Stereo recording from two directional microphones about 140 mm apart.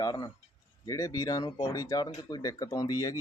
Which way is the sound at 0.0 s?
30° left (ahead or behind).